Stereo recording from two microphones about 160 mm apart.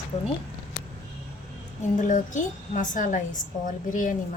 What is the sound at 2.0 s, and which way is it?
A woman's voice, 50° left (ahead or behind).